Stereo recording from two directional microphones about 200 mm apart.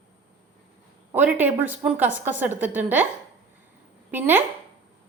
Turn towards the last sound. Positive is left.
turn(degrees=-10)  # may be behind; listen again after turning